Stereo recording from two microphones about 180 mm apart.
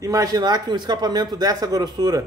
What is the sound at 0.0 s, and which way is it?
Speech, 20° right (ahead or behind).